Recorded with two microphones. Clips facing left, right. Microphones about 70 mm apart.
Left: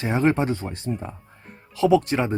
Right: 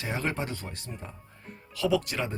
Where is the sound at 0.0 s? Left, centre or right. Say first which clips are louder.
Left 11 dB; left.